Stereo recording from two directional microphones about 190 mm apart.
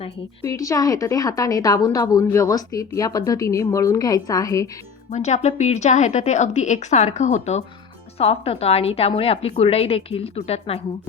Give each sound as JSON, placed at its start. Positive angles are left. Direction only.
{"t": 0.4, "sound": "a woman's voice", "side_deg": 15}
{"t": 5.1, "sound": "a woman's voice", "side_deg": 35}